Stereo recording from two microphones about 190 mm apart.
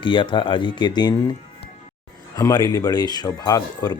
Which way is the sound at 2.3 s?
20° left (ahead or behind).